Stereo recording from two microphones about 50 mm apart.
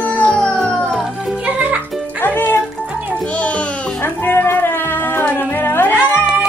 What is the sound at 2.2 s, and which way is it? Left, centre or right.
Music, left.